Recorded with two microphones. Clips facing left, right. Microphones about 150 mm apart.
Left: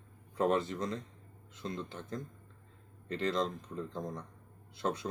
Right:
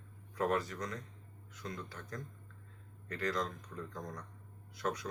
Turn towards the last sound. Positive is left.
turn(degrees=25)  # may be behind; listen again after turning